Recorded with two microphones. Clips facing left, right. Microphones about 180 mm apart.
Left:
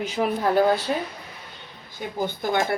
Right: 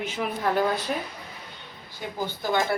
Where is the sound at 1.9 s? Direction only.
50° left (ahead or behind).